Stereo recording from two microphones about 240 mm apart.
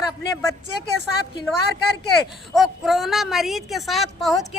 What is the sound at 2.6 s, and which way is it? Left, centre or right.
A woman's voice, centre.